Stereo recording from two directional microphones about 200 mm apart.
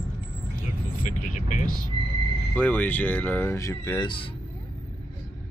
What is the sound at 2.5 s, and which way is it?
Speech, 10° left (ahead or behind).